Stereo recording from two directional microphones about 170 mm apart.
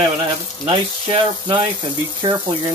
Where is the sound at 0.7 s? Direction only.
30° right (ahead or behind).